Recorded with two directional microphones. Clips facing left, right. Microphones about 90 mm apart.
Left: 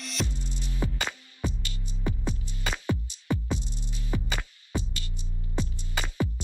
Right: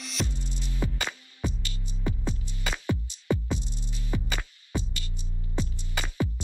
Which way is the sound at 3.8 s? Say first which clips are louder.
Even; 20° left (ahead or behind).